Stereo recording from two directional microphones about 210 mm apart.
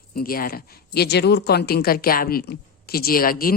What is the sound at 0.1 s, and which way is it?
Speech, 45° left (ahead or behind).